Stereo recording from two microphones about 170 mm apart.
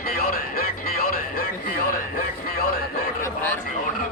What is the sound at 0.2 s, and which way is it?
Music, 60° left (ahead or behind).